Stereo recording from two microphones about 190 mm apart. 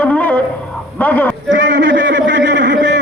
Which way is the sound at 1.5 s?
65° right (ahead or behind).